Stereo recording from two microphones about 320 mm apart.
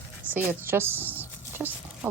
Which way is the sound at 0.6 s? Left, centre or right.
Centre.